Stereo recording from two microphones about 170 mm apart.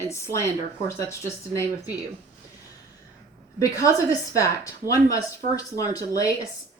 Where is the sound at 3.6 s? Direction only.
20° left (ahead or behind).